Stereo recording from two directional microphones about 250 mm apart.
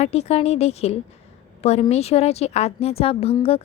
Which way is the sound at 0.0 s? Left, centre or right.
Left.